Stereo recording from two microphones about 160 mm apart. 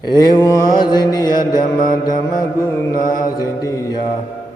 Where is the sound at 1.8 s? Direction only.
60° left (ahead or behind).